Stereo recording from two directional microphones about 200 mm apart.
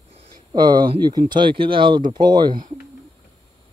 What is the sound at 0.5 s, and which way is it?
Speech, 20° right (ahead or behind).